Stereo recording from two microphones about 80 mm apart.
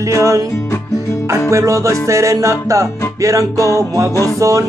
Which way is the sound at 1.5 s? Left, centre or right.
Right.